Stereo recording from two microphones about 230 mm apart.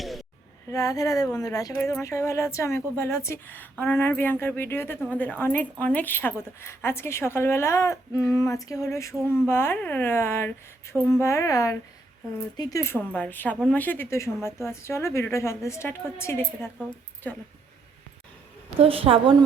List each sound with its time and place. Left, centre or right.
0.0 s a sound: centre
0.7 s speech: centre
18.8 s a woman's voice: right